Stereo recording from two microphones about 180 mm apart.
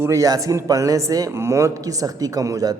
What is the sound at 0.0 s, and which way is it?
Speech, 20° right (ahead or behind).